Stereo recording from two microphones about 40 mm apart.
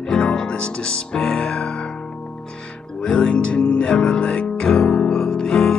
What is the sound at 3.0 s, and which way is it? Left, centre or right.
Music, left.